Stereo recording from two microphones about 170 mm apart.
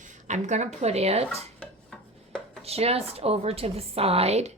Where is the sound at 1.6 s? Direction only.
5° left (ahead or behind).